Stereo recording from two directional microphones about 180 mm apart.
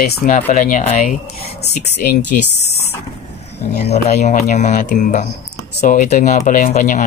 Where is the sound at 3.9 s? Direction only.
40° left (ahead or behind).